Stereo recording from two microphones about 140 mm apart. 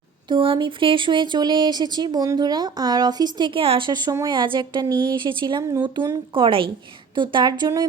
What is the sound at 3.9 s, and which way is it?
A woman's voice, 30° right (ahead or behind).